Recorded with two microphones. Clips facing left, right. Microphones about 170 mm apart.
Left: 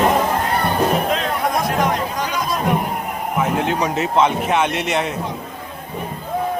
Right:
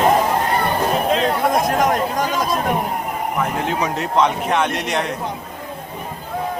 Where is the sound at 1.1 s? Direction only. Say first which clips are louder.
Right 3 dB; 30° right (ahead or behind).